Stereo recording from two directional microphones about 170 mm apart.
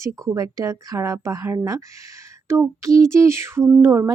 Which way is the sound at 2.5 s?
20° right (ahead or behind).